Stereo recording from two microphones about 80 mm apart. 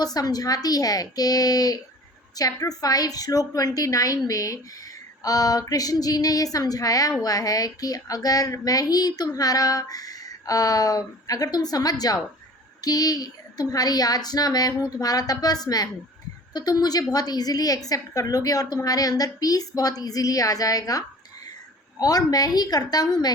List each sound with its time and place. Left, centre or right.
0.0 s a woman's voice: left